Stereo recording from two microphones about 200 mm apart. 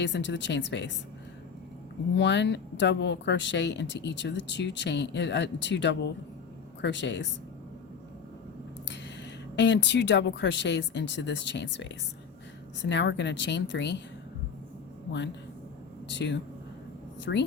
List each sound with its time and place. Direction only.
0.0 s speech: 60° left (ahead or behind)
2.1 s speech: 60° left (ahead or behind)
9.6 s speech: 60° left (ahead or behind)
16.0 s speech: 60° left (ahead or behind)